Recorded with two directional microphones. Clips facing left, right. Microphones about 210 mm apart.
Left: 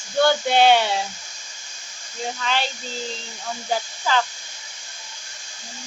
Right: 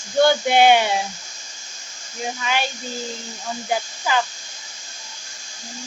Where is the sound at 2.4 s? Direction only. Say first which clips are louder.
Right 1 dB; 10° right (ahead or behind).